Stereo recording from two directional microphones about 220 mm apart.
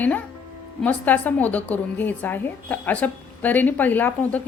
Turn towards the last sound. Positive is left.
turn(degrees=5)  # may be behind; listen again after turning